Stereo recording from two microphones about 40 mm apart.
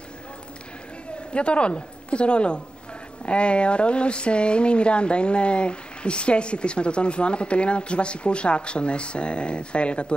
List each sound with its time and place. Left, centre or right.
1.3 s speech: left